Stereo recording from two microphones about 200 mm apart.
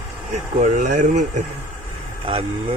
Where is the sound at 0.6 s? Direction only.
40° right (ahead or behind).